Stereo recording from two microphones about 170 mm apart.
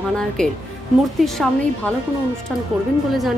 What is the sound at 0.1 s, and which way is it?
Speech, 5° left (ahead or behind).